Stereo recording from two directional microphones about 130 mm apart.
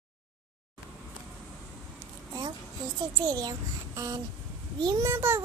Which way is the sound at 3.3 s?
30° right (ahead or behind).